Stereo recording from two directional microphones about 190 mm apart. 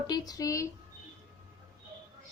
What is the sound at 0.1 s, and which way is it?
Speech, 20° left (ahead or behind).